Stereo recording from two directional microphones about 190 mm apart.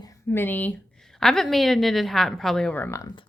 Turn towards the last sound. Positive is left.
turn(degrees=10)  # may be behind; listen again after turning